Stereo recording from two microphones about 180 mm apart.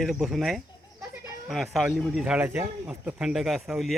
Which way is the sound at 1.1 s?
Centre (ahead or behind).